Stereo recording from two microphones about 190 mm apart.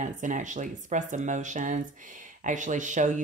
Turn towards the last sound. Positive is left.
turn(degrees=-40)  # may be behind; listen again after turning